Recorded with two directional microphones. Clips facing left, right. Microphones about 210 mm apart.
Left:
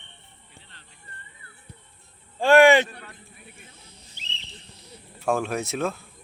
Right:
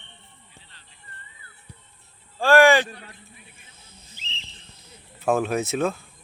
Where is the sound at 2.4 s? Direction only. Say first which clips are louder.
Left 1 dB; 20° left (ahead or behind).